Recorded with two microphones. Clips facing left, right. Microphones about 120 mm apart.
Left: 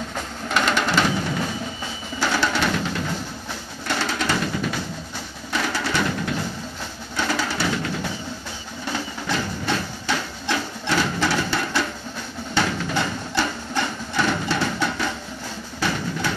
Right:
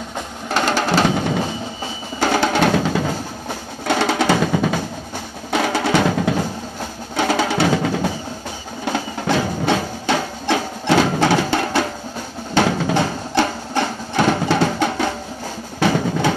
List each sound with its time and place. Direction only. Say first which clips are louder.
0.5 s music: right 3 dB; 35° right (ahead or behind)
1.0 s music: right 5 dB; 55° right (ahead or behind)
2.1 s drum: right 6 dB; 50° right (ahead or behind); by 3.1 s 90° right
3.8 s drum: right 8 dB; 80° right
5.5 s music: right 7 dB; 75° right (ahead or behind)
7.2 s music: right 7 dB; 65° right (ahead or behind); by 8.1 s 90° right
8.8 s music: right 7 dB; 70° right (ahead or behind); by 10.2 s 85° right
10.4 s music: right 6 dB; 70° right (ahead or behind)
12.6 s music: right 6 dB; 90° right; by 13.5 s 60° right (ahead or behind)
13.7 s a sound: right 6 dB; 55° right (ahead or behind)
15.8 s drum: right 8 dB; 90° right